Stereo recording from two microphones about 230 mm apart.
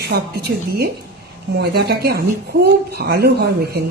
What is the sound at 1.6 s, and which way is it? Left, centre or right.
Speech, right.